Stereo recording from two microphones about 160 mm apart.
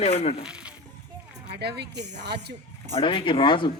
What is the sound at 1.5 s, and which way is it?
Speech, 90° right.